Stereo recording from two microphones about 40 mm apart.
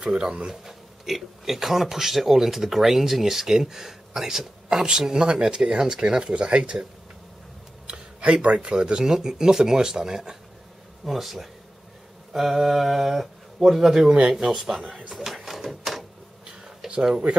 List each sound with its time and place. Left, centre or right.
0.1 s speech: right
0.7 s speech: centre
15.1 s printer: centre
16.4 s a sound: centre
17.3 s speech: right